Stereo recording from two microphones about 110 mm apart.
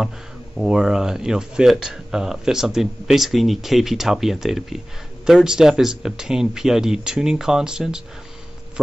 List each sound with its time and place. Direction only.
0.6 s speech: 5° right (ahead or behind)